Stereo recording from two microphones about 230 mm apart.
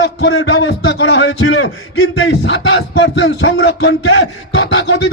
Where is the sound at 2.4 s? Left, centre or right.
Left.